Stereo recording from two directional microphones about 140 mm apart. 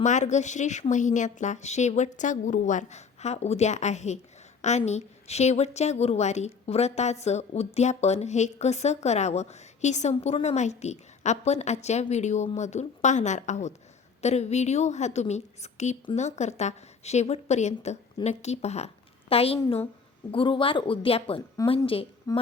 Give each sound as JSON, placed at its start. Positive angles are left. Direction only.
{"t": 0.0, "sound": "a woman's voice", "side_deg": 60}
{"t": 22.3, "sound": "speech", "side_deg": 25}